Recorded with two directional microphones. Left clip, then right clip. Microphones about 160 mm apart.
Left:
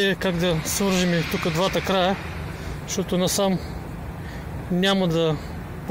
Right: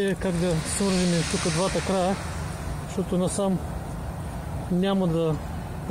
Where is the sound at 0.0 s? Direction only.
15° left (ahead or behind).